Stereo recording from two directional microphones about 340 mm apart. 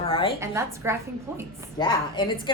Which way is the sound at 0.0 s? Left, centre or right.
Centre.